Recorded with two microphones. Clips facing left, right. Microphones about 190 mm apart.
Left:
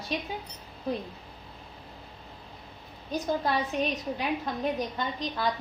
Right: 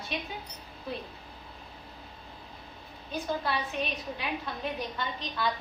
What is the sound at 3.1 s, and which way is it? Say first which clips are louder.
Speech: left 4 dB; 45° left (ahead or behind).